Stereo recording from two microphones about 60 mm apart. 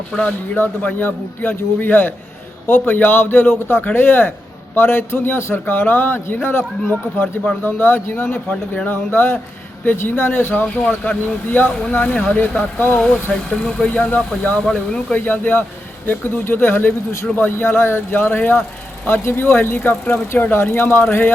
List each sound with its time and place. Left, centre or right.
0.2 s a man's voice: left
10.5 s a man's voice: left
13.5 s speech: centre
14.6 s speech: centre
15.1 s a man's voice: left